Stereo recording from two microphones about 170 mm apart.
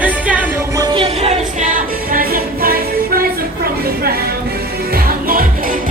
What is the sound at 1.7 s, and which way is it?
Music, 55° right (ahead or behind).